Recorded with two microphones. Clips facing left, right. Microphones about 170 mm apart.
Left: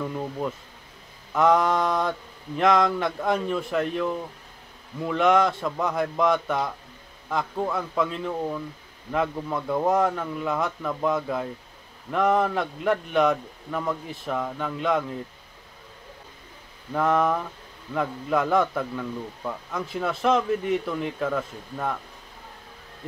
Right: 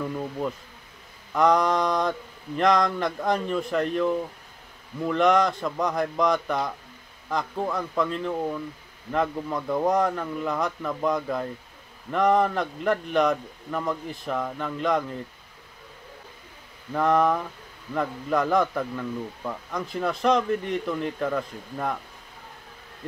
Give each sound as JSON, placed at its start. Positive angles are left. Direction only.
{"t": 1.3, "sound": "a man's voice", "side_deg": 5}
{"t": 16.9, "sound": "a man's voice", "side_deg": 0}